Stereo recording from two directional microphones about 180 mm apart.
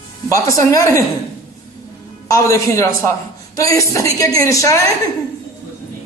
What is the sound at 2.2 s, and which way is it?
A woman's voice, 15° left (ahead or behind).